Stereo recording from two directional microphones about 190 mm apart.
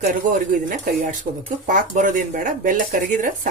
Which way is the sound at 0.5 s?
45° right (ahead or behind).